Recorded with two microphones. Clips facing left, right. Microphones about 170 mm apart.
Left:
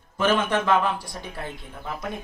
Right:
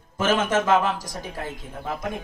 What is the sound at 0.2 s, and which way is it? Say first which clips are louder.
Speech: right 1 dB; 45° right (ahead or behind).